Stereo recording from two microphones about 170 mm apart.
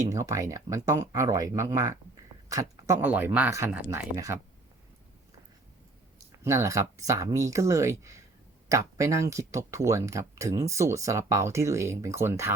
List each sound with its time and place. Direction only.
0.1 s speech: 20° right (ahead or behind)
6.4 s speech: 15° right (ahead or behind)